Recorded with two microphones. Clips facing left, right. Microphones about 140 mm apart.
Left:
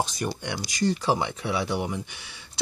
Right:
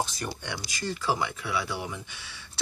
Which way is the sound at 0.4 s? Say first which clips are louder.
Left 8 dB; 15° left (ahead or behind).